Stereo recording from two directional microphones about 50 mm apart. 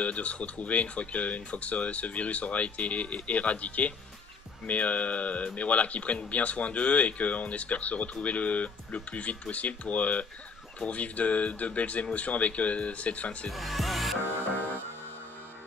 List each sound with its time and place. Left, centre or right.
0.0 s speech: left
13.5 s music: centre